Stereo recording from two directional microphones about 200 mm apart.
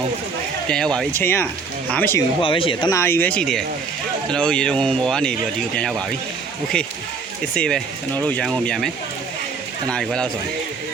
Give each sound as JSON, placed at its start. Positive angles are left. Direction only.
{"t": 0.7, "sound": "speech", "side_deg": 5}
{"t": 2.4, "sound": "speech", "side_deg": 25}
{"t": 2.9, "sound": "speech", "side_deg": 10}
{"t": 7.5, "sound": "speech", "side_deg": 5}
{"t": 9.9, "sound": "speech", "side_deg": 0}